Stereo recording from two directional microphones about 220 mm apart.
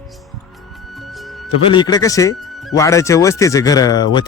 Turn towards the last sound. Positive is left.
turn(degrees=20)  # may be behind; listen again after turning